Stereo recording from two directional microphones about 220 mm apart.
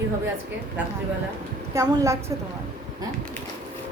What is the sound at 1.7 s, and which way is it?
Speech, 15° right (ahead or behind).